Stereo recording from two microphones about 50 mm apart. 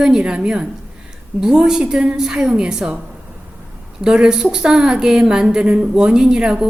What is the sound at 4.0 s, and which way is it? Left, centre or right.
A woman's voice, centre.